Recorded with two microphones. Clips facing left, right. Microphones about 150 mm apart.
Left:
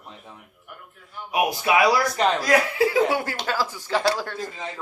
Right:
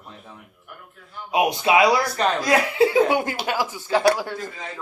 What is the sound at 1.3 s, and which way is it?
Speech, 20° right (ahead or behind).